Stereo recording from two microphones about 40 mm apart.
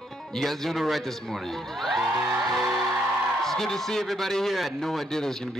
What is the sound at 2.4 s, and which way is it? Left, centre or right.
Music, centre.